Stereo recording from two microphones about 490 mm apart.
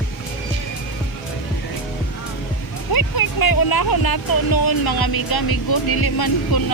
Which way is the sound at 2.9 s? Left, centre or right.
Left.